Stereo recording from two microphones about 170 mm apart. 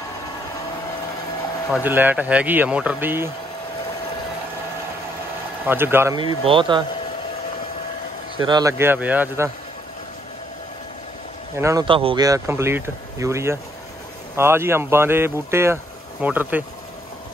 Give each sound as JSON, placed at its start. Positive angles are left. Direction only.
{"t": 1.7, "sound": "speech", "side_deg": -10}
{"t": 5.7, "sound": "speech", "side_deg": -15}
{"t": 6.4, "sound": "speech", "side_deg": -30}
{"t": 8.4, "sound": "speech", "side_deg": -25}
{"t": 11.5, "sound": "speech", "side_deg": -15}
{"t": 11.8, "sound": "speech", "side_deg": -30}
{"t": 12.3, "sound": "speech", "side_deg": -15}